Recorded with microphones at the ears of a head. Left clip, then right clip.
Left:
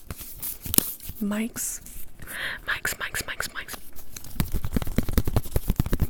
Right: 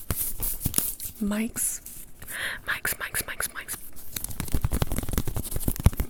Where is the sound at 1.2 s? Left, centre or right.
Centre.